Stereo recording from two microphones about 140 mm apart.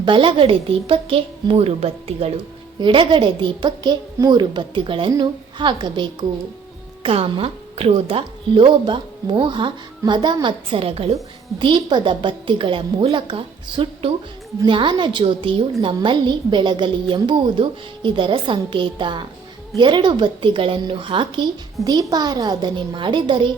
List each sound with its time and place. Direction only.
0.0 s a woman's voice: 35° right (ahead or behind)
2.8 s a woman's voice: 35° right (ahead or behind)